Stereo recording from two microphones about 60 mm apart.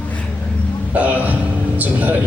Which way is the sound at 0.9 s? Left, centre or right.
Right.